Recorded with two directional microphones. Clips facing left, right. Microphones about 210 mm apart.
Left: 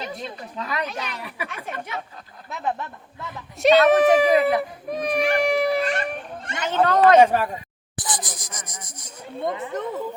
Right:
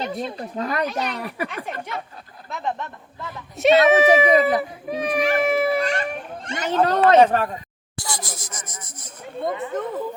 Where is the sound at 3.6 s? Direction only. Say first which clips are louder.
Even; centre (ahead or behind).